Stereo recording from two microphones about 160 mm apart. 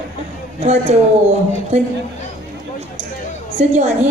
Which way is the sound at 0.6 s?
45° right (ahead or behind).